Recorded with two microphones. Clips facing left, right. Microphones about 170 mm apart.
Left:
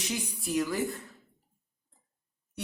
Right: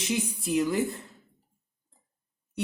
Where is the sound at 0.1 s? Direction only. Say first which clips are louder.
Right 5 dB; 25° right (ahead or behind).